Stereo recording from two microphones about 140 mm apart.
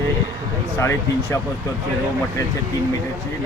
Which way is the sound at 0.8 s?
20° left (ahead or behind).